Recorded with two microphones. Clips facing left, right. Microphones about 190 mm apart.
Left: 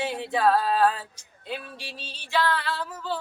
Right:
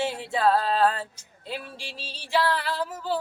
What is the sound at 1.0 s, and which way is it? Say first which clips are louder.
Female singing: right 6 dB; 30° right (ahead or behind).